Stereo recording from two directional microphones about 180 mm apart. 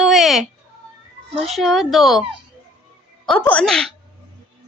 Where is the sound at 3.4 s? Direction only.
10° left (ahead or behind).